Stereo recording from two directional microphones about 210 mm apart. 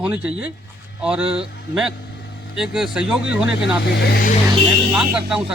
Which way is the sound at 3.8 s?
50° left (ahead or behind).